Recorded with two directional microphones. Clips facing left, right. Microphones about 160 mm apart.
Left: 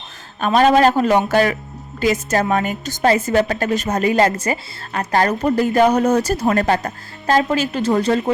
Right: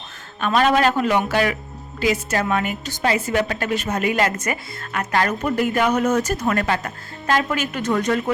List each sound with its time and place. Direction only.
0.3 s a woman's voice: 40° left (ahead or behind)